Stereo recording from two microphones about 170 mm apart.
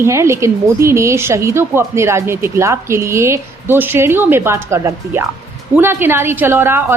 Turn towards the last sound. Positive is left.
turn(degrees=-15)  # may be behind; listen again after turning